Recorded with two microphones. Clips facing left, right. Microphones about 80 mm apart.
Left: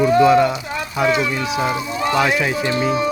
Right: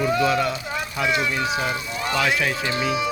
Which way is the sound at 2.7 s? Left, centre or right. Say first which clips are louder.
Left 5 dB; left.